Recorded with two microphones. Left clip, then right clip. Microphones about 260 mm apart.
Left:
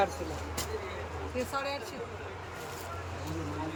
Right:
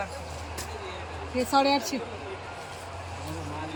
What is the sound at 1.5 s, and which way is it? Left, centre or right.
Speech, right.